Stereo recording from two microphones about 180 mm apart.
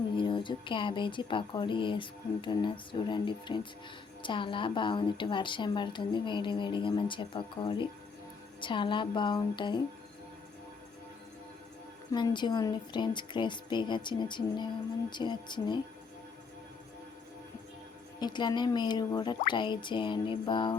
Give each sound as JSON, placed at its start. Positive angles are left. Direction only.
{"t": 0.2, "sound": "a woman's voice", "side_deg": 25}
{"t": 12.1, "sound": "a woman's voice", "side_deg": 25}
{"t": 18.2, "sound": "a woman's voice", "side_deg": 25}